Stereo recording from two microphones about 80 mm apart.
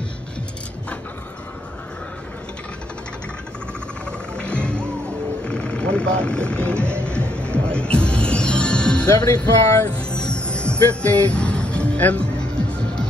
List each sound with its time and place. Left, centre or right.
4.4 s music: centre
5.5 s vehicle: centre
7.0 s music: centre
9.0 s music: left
9.8 s music: centre